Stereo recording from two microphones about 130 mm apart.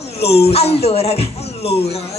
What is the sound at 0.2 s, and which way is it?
A woman's voice, 50° left (ahead or behind).